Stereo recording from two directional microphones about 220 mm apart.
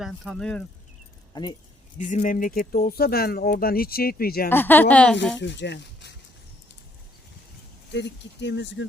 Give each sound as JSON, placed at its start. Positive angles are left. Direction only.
{"t": 0.0, "sound": "speech", "side_deg": 0}
{"t": 1.3, "sound": "speech", "side_deg": 20}
{"t": 2.0, "sound": "speech", "side_deg": 35}
{"t": 4.4, "sound": "speech", "side_deg": 10}
{"t": 5.4, "sound": "speech", "side_deg": 55}
{"t": 7.9, "sound": "speech", "side_deg": 50}